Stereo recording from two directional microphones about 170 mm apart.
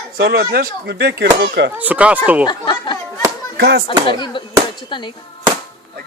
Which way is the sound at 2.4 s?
30° left (ahead or behind).